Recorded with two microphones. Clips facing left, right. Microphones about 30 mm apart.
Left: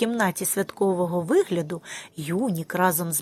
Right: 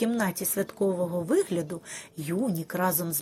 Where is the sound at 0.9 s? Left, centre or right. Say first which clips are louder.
Left 4 dB; left.